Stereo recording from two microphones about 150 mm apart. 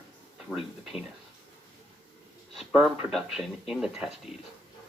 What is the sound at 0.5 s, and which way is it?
Speech, centre (ahead or behind).